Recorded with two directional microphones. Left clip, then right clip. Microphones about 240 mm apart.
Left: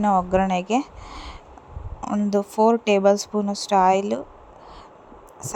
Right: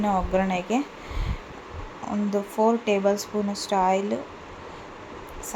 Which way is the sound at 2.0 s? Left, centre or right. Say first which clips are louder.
Left 4 dB; left.